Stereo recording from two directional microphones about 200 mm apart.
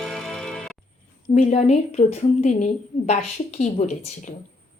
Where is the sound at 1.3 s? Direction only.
30° left (ahead or behind).